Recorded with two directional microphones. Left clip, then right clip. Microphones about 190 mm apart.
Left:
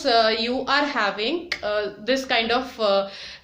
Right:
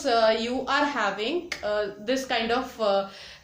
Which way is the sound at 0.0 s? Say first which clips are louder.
Left 3 dB; 15° left (ahead or behind).